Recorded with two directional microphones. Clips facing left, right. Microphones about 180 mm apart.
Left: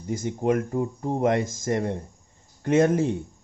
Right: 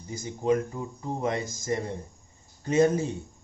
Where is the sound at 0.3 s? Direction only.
55° left (ahead or behind).